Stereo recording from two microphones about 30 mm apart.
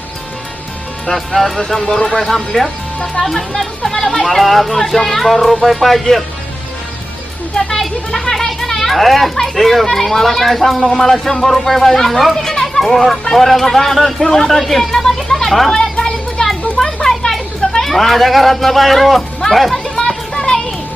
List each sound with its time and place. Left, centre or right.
1.1 s speech: centre; by 2.1 s left
2.1 s speech: centre
7.5 s a child's voice: centre
8.9 s speech: centre
12.5 s children playing: centre
13.3 s speech: centre
14.9 s a sound: centre
15.7 s children playing: centre
16.4 s children playing: left
17.8 s speech: centre
20.3 s children playing: left